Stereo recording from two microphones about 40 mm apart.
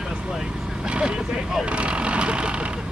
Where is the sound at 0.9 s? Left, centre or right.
Right.